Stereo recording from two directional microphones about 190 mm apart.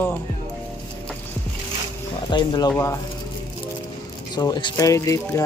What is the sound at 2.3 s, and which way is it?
Speech, 25° left (ahead or behind).